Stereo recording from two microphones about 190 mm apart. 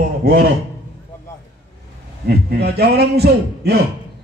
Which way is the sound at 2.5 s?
55° right (ahead or behind).